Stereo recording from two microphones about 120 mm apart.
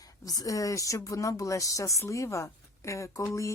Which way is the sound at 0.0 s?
30° left (ahead or behind).